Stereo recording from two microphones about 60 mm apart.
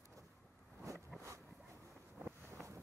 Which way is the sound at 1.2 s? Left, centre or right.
Right.